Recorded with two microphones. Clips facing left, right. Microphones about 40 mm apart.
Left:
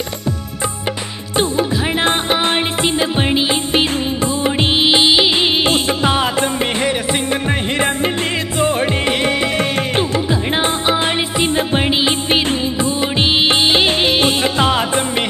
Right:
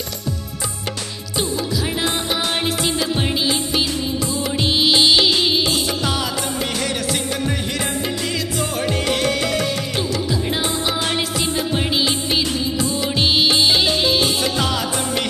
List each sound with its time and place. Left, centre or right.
1.3 s music: left